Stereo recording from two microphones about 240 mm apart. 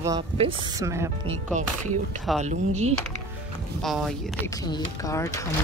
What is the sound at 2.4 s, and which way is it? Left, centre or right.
Speech, right.